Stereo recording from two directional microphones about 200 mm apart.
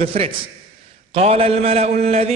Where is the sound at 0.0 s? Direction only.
30° right (ahead or behind).